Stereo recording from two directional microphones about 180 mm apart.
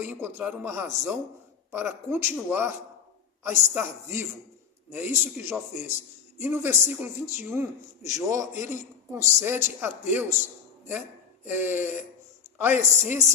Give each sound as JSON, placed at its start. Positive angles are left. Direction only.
{"t": 0.0, "sound": "a man's voice", "side_deg": -10}
{"t": 4.9, "sound": "a man's voice", "side_deg": -10}
{"t": 11.4, "sound": "a man's voice", "side_deg": -10}